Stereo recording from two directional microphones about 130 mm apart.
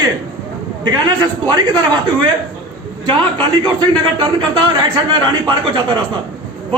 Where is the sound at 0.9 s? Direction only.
30° right (ahead or behind).